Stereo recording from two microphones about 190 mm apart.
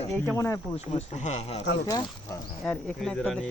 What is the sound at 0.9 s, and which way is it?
Speech, 35° left (ahead or behind).